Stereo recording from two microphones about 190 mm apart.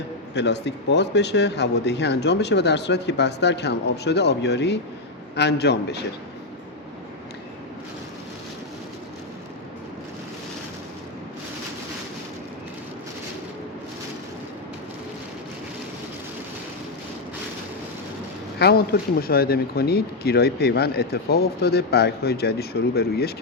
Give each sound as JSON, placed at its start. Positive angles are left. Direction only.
{"t": 0.3, "sound": "speech", "side_deg": 65}
{"t": 18.6, "sound": "speech", "side_deg": 55}